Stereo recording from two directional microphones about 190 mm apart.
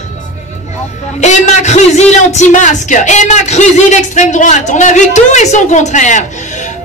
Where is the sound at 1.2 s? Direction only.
40° left (ahead or behind).